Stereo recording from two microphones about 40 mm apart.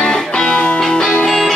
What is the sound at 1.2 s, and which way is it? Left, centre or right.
Music, centre.